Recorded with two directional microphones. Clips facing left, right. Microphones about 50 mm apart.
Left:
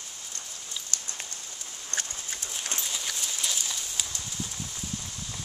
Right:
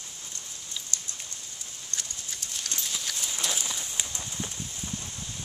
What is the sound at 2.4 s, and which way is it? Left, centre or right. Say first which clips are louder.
Clip-clop: left 1 dB; left.